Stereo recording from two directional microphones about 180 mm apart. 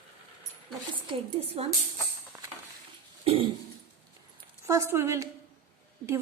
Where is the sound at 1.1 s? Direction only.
35° right (ahead or behind).